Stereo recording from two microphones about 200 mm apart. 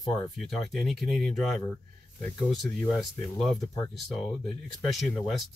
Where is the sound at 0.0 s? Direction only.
20° left (ahead or behind).